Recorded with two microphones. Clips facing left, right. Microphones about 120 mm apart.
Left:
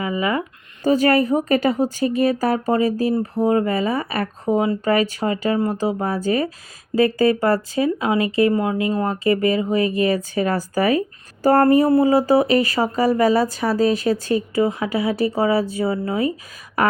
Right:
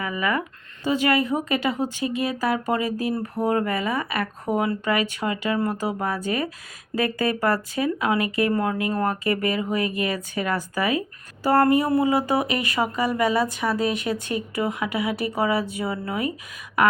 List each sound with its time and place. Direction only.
0.0 s speech: 25° left (ahead or behind)
0.9 s speech: 40° left (ahead or behind); by 4.8 s 25° left (ahead or behind)
4.9 s speech: 35° left (ahead or behind)
16.8 s a sound: 35° left (ahead or behind)